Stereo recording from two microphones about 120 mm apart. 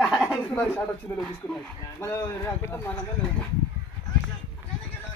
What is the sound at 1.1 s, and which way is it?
Speech, 25° left (ahead or behind).